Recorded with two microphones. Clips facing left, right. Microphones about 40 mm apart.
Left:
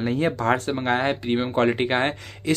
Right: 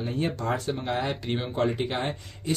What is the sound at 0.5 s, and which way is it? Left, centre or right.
Speech, left.